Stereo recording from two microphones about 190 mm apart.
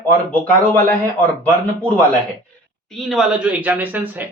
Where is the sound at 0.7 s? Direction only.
10° left (ahead or behind).